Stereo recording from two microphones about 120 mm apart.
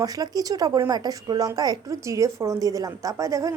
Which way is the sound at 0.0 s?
30° right (ahead or behind).